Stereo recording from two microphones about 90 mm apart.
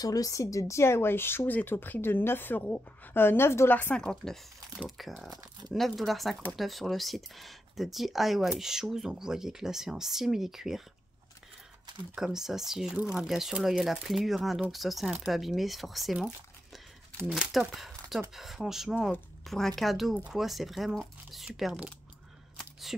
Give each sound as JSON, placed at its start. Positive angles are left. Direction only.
{"t": 0.0, "sound": "speech", "side_deg": 40}
{"t": 3.9, "sound": "speech", "side_deg": 10}
{"t": 5.3, "sound": "speech", "side_deg": -45}
{"t": 5.7, "sound": "speech", "side_deg": 0}
{"t": 12.2, "sound": "speech", "side_deg": -5}
{"t": 17.3, "sound": "speech", "side_deg": -5}
{"t": 22.6, "sound": "a sound", "side_deg": 0}